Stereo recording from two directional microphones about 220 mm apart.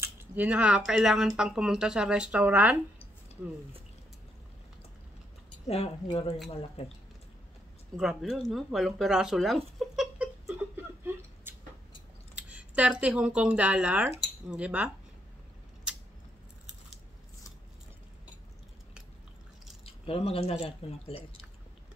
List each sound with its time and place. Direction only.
0.0 s speech: 5° right (ahead or behind)
5.7 s speech: 25° left (ahead or behind)
8.0 s a sound: centre (ahead or behind)
12.4 s speech: 5° right (ahead or behind)
15.9 s scissors: 5° right (ahead or behind)
19.8 s speech: 25° left (ahead or behind)